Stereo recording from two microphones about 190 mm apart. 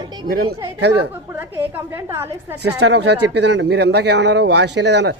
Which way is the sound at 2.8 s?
65° right (ahead or behind).